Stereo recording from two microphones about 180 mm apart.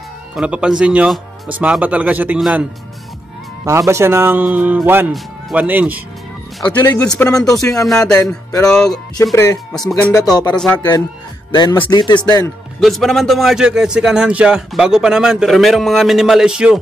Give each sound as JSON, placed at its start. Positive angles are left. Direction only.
{"t": 0.4, "sound": "speech", "side_deg": -5}
{"t": 3.6, "sound": "speech", "side_deg": -15}
{"t": 6.8, "sound": "speech", "side_deg": 10}
{"t": 7.3, "sound": "a man's voice", "side_deg": 5}
{"t": 8.0, "sound": "speech", "side_deg": 15}
{"t": 8.6, "sound": "a man's voice", "side_deg": 5}
{"t": 9.1, "sound": "speech", "side_deg": 20}
{"t": 9.7, "sound": "a man's voice", "side_deg": 5}
{"t": 10.1, "sound": "speech", "side_deg": 20}
{"t": 10.5, "sound": "a man's voice", "side_deg": 5}
{"t": 11.5, "sound": "speech", "side_deg": 25}
{"t": 12.8, "sound": "a man's voice", "side_deg": 0}